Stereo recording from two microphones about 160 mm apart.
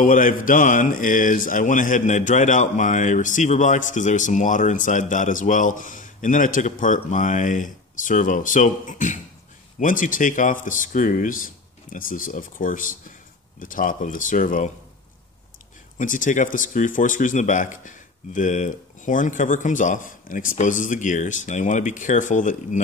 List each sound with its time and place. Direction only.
0.0 s speech: 55° left (ahead or behind)
16.0 s speech: 55° left (ahead or behind)